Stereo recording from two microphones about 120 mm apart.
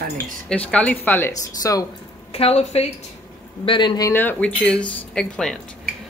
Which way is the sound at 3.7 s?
40° left (ahead or behind).